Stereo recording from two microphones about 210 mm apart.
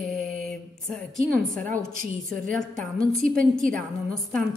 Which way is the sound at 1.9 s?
40° right (ahead or behind).